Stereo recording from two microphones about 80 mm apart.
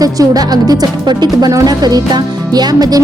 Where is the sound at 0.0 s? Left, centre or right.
Right.